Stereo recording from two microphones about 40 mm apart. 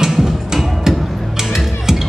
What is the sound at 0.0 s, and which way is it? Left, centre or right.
Music, centre.